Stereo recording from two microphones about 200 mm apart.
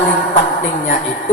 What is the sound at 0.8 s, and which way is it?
Speech, 40° left (ahead or behind).